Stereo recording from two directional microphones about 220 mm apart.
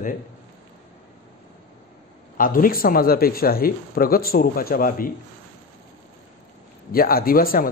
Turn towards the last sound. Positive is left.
turn(degrees=40)  # may be behind; listen again after turning